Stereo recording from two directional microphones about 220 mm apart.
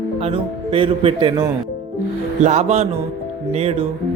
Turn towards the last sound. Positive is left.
turn(degrees=-30)  # may be behind; listen again after turning